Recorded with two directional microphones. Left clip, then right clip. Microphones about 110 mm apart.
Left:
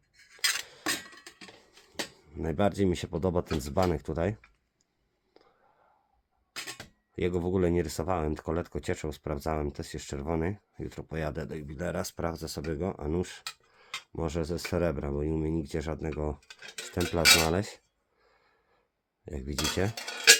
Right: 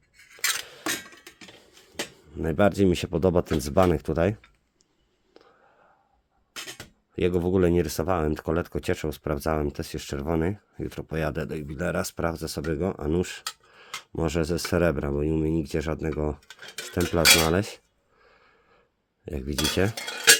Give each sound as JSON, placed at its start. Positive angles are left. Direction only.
{"t": 0.6, "sound": "dishes", "side_deg": -30}
{"t": 0.9, "sound": "a sound", "side_deg": 5}
{"t": 2.3, "sound": "speech", "side_deg": -25}
{"t": 5.4, "sound": "whispering", "side_deg": -30}
{"t": 6.7, "sound": "speech", "side_deg": -30}
{"t": 13.7, "sound": "a sound", "side_deg": -35}
{"t": 14.2, "sound": "speech", "side_deg": -40}
{"t": 16.6, "sound": "cutlery", "side_deg": 0}
{"t": 17.0, "sound": "speech", "side_deg": -20}
{"t": 17.5, "sound": "a sound", "side_deg": -25}
{"t": 19.2, "sound": "speech", "side_deg": -30}